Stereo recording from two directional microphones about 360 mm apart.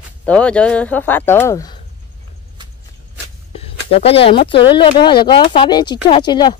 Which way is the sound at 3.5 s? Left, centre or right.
Centre.